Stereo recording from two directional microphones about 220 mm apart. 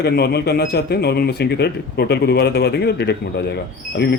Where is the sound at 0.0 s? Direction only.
45° left (ahead or behind).